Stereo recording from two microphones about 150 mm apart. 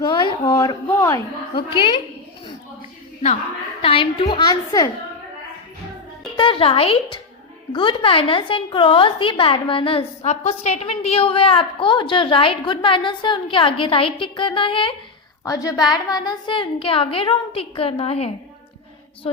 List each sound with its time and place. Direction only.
0.0 s a sound: 30° left (ahead or behind)
0.9 s speech: 20° left (ahead or behind)
1.5 s a woman's voice: 35° left (ahead or behind)
3.8 s a woman's voice: 35° left (ahead or behind)
6.3 s a woman's voice: 35° left (ahead or behind)
10.2 s a woman's voice: 50° left (ahead or behind)
15.4 s a woman's voice: 25° left (ahead or behind); by 19.4 s 40° left (ahead or behind)